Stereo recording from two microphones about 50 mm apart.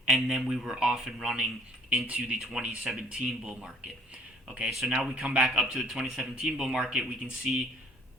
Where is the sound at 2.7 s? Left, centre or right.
Centre.